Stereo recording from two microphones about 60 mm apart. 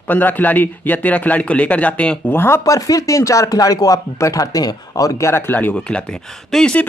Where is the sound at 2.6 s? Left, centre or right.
Left.